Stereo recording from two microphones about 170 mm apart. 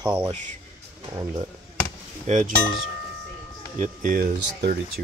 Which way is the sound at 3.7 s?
50° right (ahead or behind).